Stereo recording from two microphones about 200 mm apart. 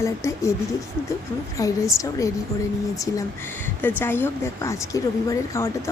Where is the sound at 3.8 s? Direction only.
10° left (ahead or behind).